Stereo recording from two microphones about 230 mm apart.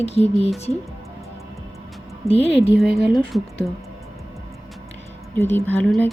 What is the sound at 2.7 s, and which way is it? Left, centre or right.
Speech, centre.